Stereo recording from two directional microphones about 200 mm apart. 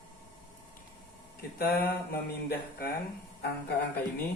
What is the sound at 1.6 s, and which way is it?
Speech, 50° left (ahead or behind).